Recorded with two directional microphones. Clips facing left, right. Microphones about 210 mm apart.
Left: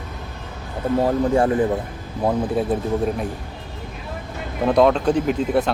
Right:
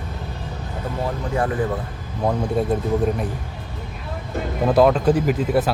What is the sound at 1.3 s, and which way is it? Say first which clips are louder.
Speech: left 2 dB; 25° left (ahead or behind).